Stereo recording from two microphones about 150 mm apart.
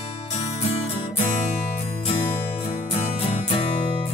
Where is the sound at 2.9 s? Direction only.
45° left (ahead or behind).